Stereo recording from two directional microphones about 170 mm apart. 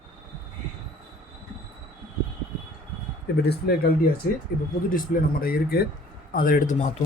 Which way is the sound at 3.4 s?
70° left (ahead or behind).